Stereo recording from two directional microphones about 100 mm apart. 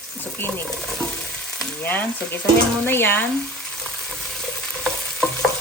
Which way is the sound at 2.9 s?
20° left (ahead or behind).